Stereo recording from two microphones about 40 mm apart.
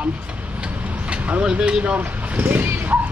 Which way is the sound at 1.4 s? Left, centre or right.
Right.